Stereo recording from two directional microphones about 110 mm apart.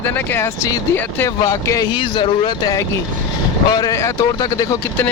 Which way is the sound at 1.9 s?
45° left (ahead or behind).